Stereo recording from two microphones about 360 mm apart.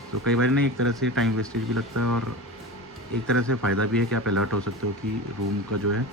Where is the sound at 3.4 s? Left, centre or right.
Right.